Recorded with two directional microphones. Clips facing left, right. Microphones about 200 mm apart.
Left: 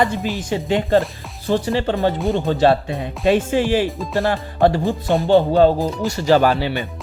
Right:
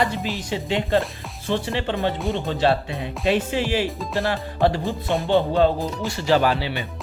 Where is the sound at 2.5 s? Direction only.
45° left (ahead or behind).